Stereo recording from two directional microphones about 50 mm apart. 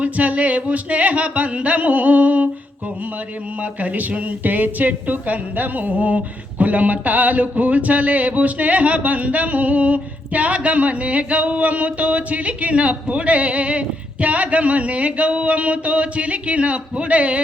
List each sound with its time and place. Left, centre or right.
0.0 s speech: right
3.6 s speech: right